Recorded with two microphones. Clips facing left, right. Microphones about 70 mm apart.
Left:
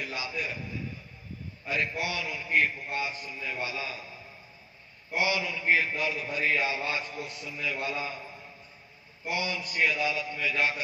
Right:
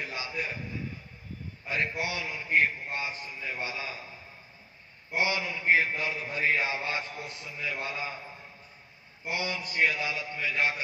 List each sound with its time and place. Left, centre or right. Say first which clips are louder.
0.0 s a sound: left 1 dB; right
1.7 s a man's voice: even; right
5.1 s a man's voice: left 1 dB; right
9.3 s a man's voice: left 1 dB; right